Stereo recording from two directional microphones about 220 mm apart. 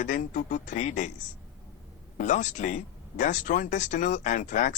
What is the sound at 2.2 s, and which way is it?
Speech, 35° left (ahead or behind).